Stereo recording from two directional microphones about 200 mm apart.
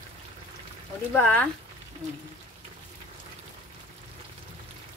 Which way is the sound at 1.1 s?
10° left (ahead or behind).